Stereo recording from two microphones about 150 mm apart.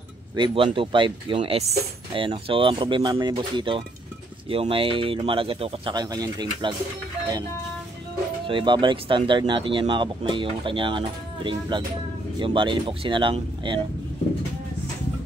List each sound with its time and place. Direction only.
0.4 s speech: 35° right (ahead or behind)
5.9 s speech: 25° right (ahead or behind)
8.5 s speech: 35° right (ahead or behind)